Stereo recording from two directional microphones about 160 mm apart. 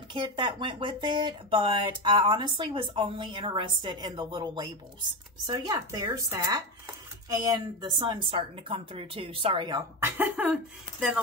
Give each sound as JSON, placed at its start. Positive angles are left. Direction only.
{"t": 0.1, "sound": "speech", "side_deg": -30}
{"t": 9.9, "sound": "speech", "side_deg": -15}